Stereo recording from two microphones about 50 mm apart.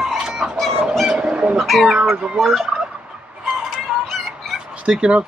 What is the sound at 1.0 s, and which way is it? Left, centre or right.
Bird, centre.